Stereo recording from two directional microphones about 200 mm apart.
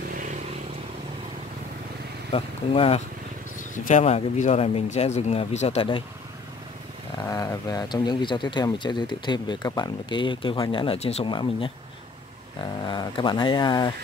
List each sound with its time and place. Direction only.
0.1 s vehicle: 40° right (ahead or behind)
2.3 s speech: 30° left (ahead or behind)
7.2 s speech: 15° left (ahead or behind)
12.8 s speech: 20° left (ahead or behind)